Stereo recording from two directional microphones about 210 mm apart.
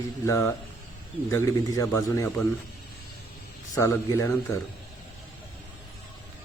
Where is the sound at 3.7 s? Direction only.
15° left (ahead or behind).